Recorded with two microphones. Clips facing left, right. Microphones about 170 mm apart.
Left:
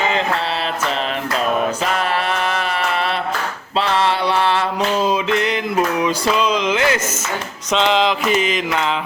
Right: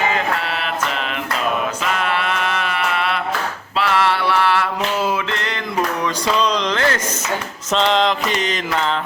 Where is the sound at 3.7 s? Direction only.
25° left (ahead or behind).